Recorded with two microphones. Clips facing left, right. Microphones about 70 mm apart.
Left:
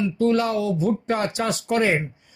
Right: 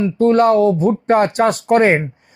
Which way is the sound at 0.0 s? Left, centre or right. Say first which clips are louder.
Right 8 dB; right.